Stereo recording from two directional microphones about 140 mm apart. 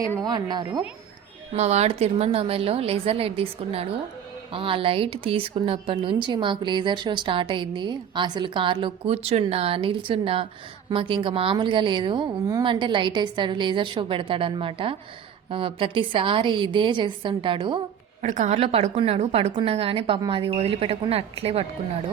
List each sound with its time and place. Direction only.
0.3 s a woman's voice: 30° right (ahead or behind)
1.5 s a woman's voice: 50° right (ahead or behind); by 17.7 s 35° right (ahead or behind)
18.2 s a woman's voice: 55° right (ahead or behind)